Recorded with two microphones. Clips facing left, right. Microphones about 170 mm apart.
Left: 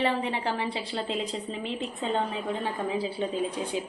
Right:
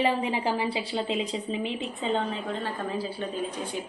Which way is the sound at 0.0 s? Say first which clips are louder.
Right 2 dB; 10° right (ahead or behind).